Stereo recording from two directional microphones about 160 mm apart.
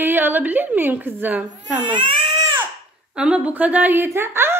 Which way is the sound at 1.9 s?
30° right (ahead or behind).